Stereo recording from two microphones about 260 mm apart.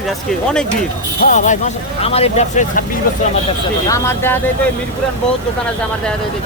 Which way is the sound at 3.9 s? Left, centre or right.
Centre.